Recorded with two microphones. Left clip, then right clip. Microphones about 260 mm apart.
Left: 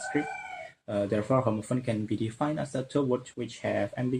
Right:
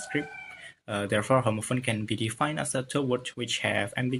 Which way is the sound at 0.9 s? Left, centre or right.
Right.